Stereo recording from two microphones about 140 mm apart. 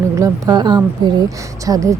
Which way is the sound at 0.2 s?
30° right (ahead or behind).